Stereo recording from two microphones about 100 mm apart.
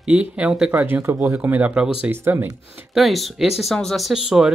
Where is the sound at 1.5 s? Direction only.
10° right (ahead or behind).